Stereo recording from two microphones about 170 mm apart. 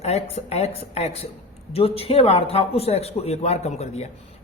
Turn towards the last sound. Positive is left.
turn(degrees=40)  # may be behind; listen again after turning